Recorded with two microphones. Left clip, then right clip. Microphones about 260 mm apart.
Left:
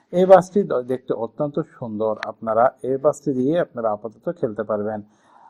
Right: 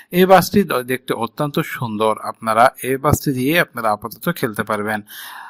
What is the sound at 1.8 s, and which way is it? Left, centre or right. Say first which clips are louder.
Speech: right 5 dB; right.